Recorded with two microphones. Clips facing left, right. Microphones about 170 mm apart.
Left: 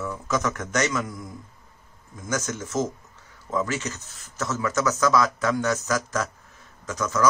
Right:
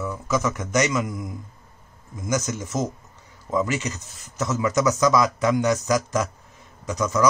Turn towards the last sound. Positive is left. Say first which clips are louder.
# right 3 dB
turn(degrees=-15)  # may be behind; listen again after turning